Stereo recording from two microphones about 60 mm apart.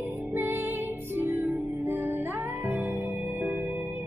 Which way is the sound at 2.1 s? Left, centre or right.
Right.